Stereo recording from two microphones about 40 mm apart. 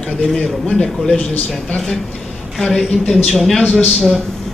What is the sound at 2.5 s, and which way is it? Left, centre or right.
A man's voice, centre.